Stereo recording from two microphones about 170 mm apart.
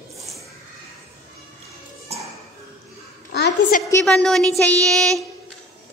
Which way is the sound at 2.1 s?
40° right (ahead or behind).